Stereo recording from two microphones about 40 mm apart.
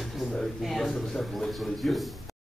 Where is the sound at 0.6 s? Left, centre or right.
Centre.